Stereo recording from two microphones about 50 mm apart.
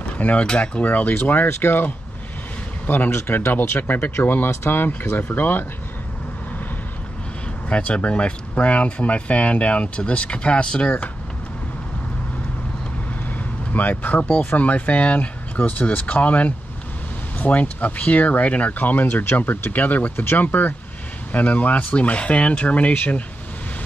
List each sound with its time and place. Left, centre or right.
0.2 s speech: left
0.8 s speech: left
3.1 s speech: left
3.5 s speech: left
7.7 s speech: left
13.7 s speech: left